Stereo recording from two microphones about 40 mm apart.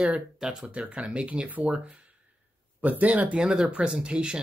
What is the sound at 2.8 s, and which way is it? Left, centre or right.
Speech, right.